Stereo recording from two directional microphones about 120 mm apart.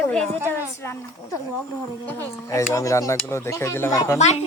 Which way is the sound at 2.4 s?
25° left (ahead or behind).